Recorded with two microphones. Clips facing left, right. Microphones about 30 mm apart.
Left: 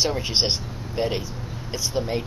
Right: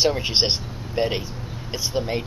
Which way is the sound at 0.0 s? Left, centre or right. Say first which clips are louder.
Right 2 dB; centre.